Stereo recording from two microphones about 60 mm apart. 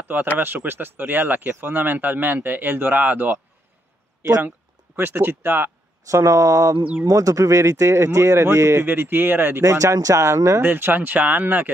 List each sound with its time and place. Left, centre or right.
0.4 s speech: right
4.9 s speech: right
6.0 s speech: right
8.8 s speech: right
9.6 s speech: right
10.6 s speech: right